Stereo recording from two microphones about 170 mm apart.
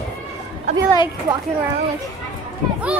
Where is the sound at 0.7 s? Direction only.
40° right (ahead or behind).